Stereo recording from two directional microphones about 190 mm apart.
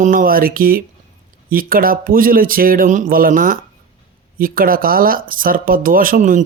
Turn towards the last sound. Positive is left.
turn(degrees=-45)  # may be behind; listen again after turning